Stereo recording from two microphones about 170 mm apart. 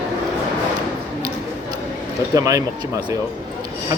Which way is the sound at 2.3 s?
20° right (ahead or behind).